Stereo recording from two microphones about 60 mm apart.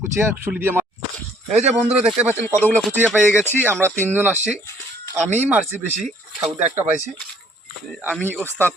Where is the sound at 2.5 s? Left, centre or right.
Left.